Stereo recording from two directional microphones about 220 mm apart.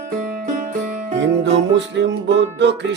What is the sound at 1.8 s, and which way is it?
Music, 55° right (ahead or behind).